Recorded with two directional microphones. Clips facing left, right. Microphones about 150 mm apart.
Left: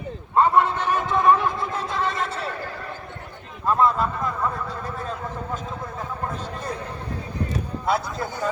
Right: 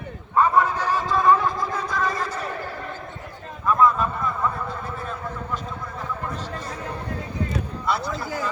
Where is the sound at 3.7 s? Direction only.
30° left (ahead or behind).